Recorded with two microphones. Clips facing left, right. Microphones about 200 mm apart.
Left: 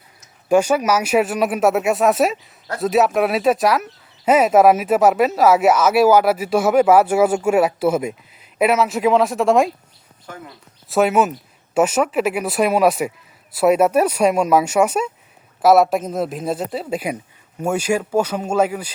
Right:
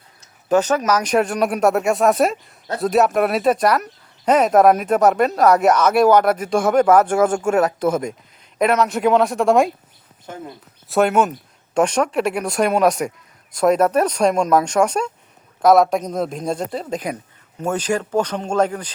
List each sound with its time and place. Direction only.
0.4 s speech: 10° left (ahead or behind)
10.2 s speech: 25° right (ahead or behind)
10.8 s speech: centre (ahead or behind)